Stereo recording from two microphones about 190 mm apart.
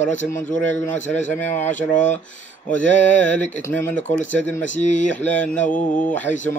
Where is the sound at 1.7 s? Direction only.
40° left (ahead or behind).